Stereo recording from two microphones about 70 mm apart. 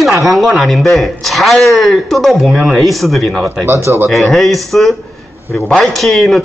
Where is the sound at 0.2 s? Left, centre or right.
Centre.